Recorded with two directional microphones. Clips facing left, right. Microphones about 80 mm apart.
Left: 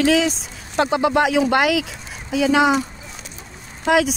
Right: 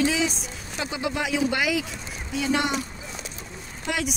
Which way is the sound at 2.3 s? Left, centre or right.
Left.